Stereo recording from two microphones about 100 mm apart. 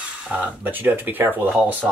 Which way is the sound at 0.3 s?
15° right (ahead or behind).